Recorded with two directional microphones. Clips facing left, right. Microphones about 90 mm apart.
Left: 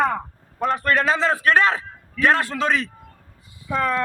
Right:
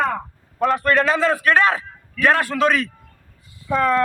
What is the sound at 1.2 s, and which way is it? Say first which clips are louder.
A man's voice: right 1 dB; 25° left (ahead or behind).